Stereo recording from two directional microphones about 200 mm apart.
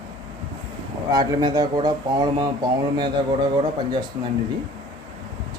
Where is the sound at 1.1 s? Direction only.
20° right (ahead or behind).